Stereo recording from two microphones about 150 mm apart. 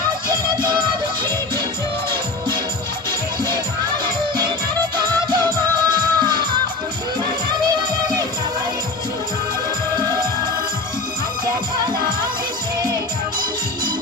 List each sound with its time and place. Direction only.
0.3 s music: 30° right (ahead or behind)
3.1 s music: 30° right (ahead or behind)
5.5 s music: 30° right (ahead or behind)
7.7 s music: 30° right (ahead or behind)